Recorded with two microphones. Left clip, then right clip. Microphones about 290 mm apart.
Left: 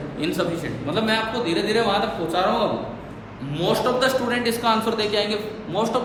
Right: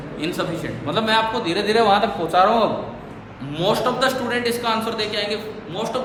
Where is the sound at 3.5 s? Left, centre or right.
Centre.